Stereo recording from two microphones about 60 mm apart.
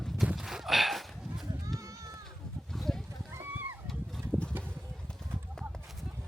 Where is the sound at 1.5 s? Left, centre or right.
Right.